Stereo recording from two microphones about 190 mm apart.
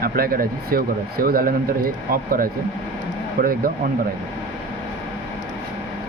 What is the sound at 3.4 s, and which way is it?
Speech, 50° right (ahead or behind).